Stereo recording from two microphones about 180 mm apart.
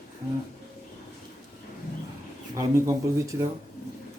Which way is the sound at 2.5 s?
15° right (ahead or behind).